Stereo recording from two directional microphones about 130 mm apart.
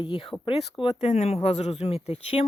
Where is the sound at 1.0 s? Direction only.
60° left (ahead or behind).